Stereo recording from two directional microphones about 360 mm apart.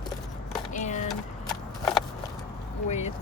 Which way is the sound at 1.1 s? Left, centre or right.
Centre.